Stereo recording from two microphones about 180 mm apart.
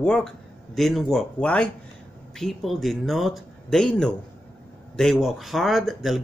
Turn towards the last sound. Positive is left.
turn(degrees=0)  # may be behind; listen again after turning